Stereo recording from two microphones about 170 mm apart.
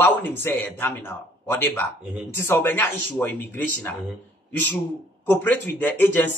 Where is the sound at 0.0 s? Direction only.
10° left (ahead or behind).